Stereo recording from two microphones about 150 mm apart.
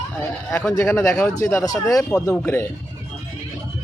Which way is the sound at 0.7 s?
20° left (ahead or behind).